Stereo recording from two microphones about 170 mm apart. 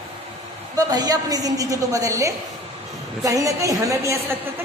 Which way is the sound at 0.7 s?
20° right (ahead or behind).